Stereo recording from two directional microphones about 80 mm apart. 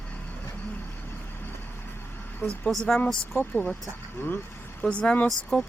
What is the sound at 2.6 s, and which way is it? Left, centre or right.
Speech, centre.